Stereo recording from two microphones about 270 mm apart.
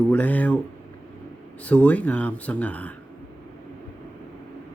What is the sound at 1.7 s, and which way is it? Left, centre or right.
Speech, centre.